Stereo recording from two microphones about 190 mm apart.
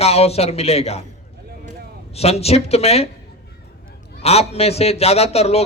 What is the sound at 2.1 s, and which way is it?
Speech, 35° left (ahead or behind).